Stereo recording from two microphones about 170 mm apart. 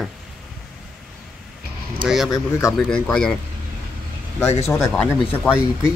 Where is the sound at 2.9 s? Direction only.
5° left (ahead or behind).